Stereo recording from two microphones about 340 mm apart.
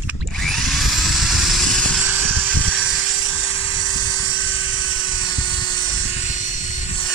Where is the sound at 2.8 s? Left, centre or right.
Centre.